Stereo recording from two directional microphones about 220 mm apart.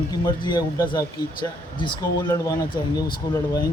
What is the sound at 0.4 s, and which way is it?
Speech, 15° left (ahead or behind).